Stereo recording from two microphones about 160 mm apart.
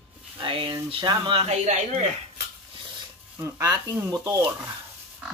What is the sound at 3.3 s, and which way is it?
Speech, 15° right (ahead or behind).